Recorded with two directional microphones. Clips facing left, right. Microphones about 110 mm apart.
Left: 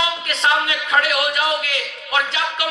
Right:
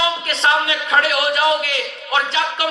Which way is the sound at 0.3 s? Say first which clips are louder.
Even; 30° right (ahead or behind).